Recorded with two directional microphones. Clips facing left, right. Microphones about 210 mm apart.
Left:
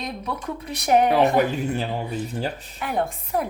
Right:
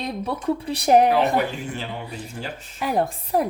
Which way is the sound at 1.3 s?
40° left (ahead or behind).